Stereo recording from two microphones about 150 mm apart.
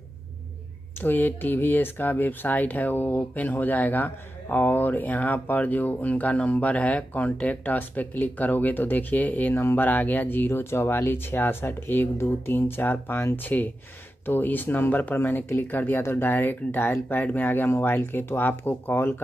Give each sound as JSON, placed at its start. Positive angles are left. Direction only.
{"t": 1.0, "sound": "speech", "side_deg": 15}